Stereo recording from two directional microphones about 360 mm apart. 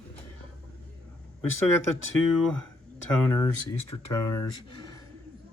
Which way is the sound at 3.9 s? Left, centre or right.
Left.